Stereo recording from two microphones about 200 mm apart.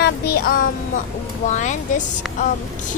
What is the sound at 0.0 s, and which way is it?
Music, 50° left (ahead or behind).